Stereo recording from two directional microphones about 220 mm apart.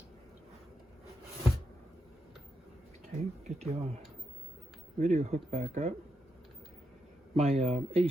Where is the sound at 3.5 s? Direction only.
30° right (ahead or behind).